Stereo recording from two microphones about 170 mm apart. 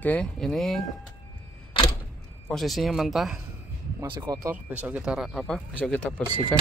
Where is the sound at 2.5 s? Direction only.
Centre (ahead or behind).